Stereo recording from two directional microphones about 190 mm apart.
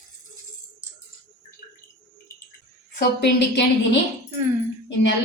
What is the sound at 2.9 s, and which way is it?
A woman's voice, 60° left (ahead or behind).